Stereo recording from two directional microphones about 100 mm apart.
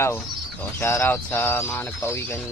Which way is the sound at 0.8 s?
25° left (ahead or behind).